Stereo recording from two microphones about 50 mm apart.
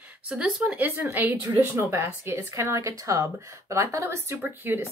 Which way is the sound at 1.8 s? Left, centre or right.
Right.